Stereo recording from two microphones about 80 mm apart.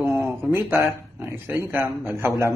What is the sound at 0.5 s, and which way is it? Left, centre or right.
A man's voice, right.